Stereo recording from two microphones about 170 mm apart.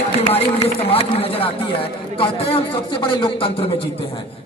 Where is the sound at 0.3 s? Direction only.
35° left (ahead or behind).